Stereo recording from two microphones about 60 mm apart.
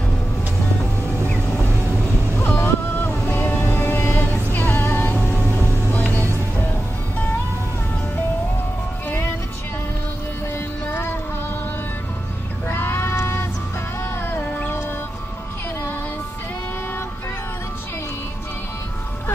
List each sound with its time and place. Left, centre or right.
2.3 s boat: left
3.3 s music: left
9.0 s music: left
10.9 s music: left
12.6 s a sound: left
14.2 s music: left